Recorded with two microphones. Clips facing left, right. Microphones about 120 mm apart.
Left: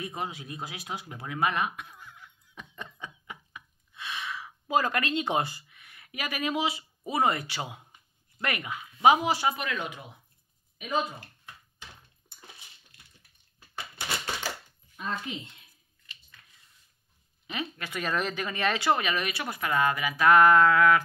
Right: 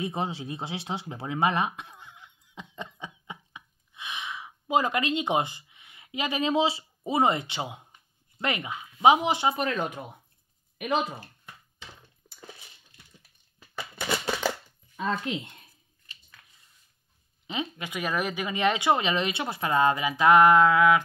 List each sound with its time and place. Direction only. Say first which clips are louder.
0.0 s a sound: right 5 dB; 25° right (ahead or behind)
8.4 s speech: right 2 dB; 20° right (ahead or behind)
9.6 s speech: right 5 dB; 40° right (ahead or behind)
10.8 s speech: right 3 dB; 80° right
15.0 s speech: right 5 dB; 90° right
15.4 s speech: right 2 dB; 50° right (ahead or behind)
17.5 s speech: right 3 dB; 20° right (ahead or behind)